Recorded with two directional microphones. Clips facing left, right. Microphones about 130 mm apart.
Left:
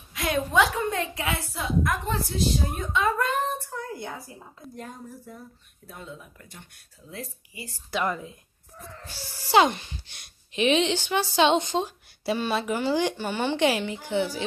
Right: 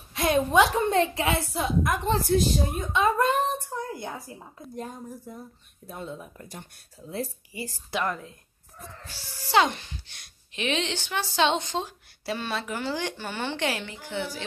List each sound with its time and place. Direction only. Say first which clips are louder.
0.3 s a woman's voice: right 2 dB; 25° right (ahead or behind)
2.2 s speech: right 4 dB; 50° right (ahead or behind)
2.9 s a woman's voice: right 2 dB; 20° right (ahead or behind)
5.9 s speech: right 4 dB; 30° right (ahead or behind)
8.1 s speech: left 2 dB; 5° left (ahead or behind)
9.5 s speech: left 3 dB; 10° left (ahead or behind)